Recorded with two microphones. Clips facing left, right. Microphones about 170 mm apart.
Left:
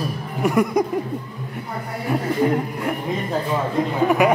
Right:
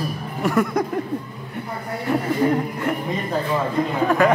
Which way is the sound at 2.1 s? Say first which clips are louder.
Even; centre (ahead or behind).